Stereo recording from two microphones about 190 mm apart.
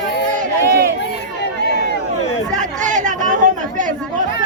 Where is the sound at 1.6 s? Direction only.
60° left (ahead or behind).